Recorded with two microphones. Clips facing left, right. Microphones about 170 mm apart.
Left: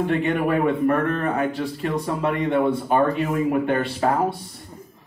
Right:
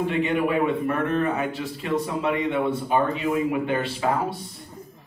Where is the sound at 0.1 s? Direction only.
50° left (ahead or behind).